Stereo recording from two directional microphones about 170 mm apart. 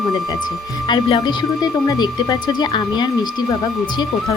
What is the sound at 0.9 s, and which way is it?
A woman's voice, 25° left (ahead or behind).